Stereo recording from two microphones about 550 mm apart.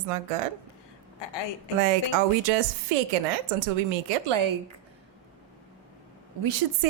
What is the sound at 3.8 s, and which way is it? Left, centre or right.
Speech, right.